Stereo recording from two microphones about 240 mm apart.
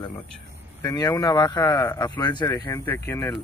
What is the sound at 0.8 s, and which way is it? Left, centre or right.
Speech, centre.